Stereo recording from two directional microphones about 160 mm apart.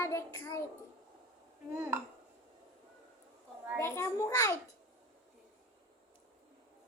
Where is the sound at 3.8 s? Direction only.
20° left (ahead or behind).